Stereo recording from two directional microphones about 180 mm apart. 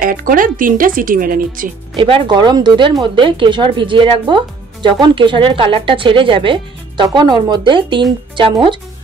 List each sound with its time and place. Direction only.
0.0 s speech: 50° right (ahead or behind)
2.0 s speech: 30° right (ahead or behind)